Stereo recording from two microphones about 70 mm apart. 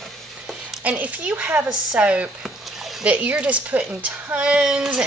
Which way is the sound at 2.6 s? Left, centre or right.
Centre.